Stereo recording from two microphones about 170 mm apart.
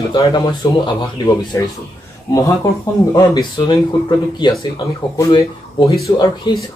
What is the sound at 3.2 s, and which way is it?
Speech, 25° left (ahead or behind).